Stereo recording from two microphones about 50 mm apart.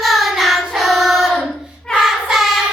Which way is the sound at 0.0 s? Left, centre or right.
Centre.